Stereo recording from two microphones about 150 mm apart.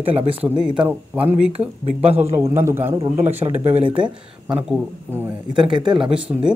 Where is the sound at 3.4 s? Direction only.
35° right (ahead or behind).